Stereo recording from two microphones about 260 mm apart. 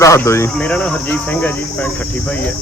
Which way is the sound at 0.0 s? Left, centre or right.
Centre.